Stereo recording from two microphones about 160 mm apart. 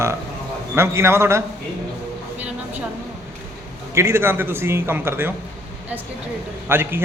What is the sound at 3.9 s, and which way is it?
A woman's voice, 15° right (ahead or behind).